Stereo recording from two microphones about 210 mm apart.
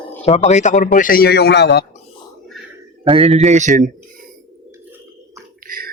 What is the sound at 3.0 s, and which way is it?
Speech, 25° right (ahead or behind).